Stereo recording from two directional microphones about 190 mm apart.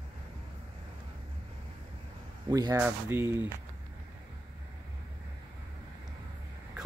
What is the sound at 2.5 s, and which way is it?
Speech, 20° right (ahead or behind).